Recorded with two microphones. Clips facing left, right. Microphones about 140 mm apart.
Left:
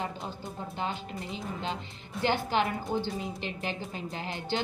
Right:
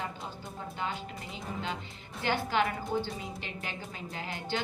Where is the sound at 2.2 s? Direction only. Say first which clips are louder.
Left 2 dB; 25° left (ahead or behind).